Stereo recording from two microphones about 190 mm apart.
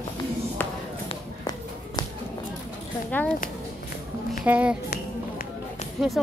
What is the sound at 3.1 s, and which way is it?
Speech, 10° left (ahead or behind).